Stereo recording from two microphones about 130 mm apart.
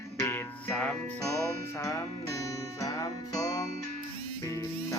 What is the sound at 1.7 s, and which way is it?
Music, 25° left (ahead or behind).